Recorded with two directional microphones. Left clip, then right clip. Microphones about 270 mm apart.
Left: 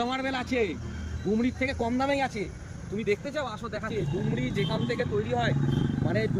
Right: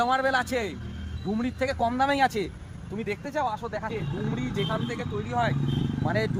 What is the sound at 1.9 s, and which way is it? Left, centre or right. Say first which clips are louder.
Speech: right 5 dB; centre.